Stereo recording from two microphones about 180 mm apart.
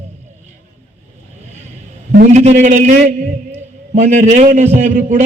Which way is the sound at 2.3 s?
40° right (ahead or behind).